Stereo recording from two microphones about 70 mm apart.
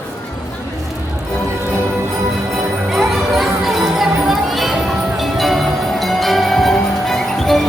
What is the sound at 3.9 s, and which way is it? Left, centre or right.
Crowd, centre.